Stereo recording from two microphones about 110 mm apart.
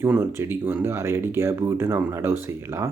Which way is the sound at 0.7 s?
25° right (ahead or behind).